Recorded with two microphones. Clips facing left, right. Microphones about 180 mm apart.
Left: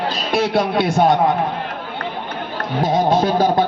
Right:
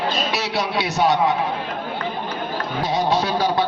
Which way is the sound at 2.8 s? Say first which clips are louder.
Left 5 dB; 50° left (ahead or behind).